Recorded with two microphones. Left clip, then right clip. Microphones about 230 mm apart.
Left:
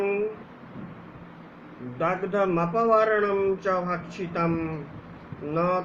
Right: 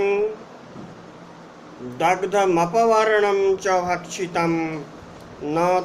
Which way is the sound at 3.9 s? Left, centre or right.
Centre.